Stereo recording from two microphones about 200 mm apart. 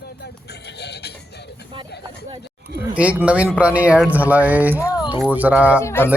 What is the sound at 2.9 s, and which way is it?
Speech, 5° right (ahead or behind).